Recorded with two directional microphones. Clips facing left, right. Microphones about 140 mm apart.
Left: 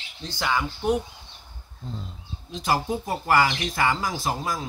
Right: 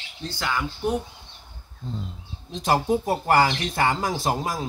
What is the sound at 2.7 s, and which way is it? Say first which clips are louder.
Speech: right 4 dB; 30° right (ahead or behind).